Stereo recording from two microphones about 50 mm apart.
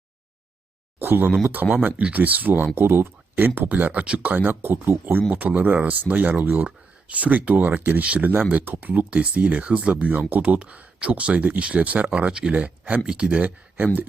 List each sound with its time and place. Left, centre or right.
0.9 s a sound: right
1.6 s speech: centre
2.0 s speech: right
2.7 s speech: right
4.6 s speech: right
5.3 s speech: right
8.6 s speech: right
8.9 s speech: right